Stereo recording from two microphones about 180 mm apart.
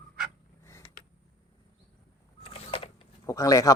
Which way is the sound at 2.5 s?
30° left (ahead or behind).